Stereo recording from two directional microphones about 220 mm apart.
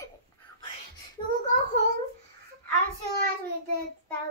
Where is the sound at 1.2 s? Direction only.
20° left (ahead or behind).